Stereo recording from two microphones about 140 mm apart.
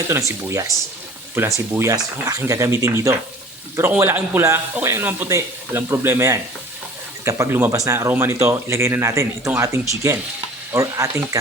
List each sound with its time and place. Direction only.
0.1 s speech: 20° right (ahead or behind)